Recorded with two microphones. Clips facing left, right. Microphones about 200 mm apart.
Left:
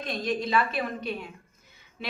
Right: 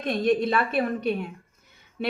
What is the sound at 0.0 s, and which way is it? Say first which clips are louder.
A woman's voice: right 7 dB; 60° right (ahead or behind).